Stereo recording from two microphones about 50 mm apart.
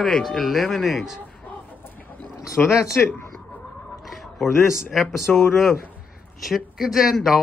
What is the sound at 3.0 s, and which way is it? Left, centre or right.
Speech, left.